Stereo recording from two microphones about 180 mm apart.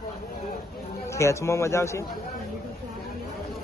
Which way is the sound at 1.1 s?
15° left (ahead or behind).